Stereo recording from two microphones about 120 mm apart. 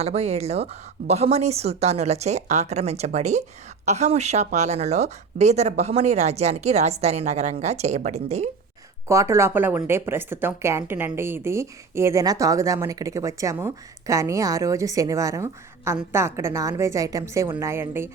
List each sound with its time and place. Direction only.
0.0 s a woman's voice: 60° right (ahead or behind)
9.0 s speech: 25° right (ahead or behind)